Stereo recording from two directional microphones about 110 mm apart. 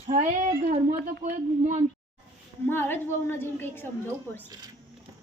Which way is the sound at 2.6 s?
20° left (ahead or behind).